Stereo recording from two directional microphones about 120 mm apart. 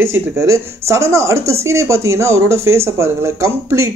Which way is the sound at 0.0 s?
20° right (ahead or behind).